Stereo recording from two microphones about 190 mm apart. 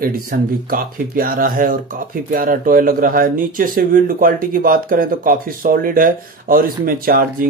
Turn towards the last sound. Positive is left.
turn(degrees=-50)  # may be behind; listen again after turning